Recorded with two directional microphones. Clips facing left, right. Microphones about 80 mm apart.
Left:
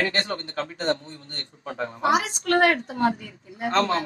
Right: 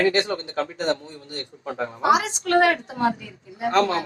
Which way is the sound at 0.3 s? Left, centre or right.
Right.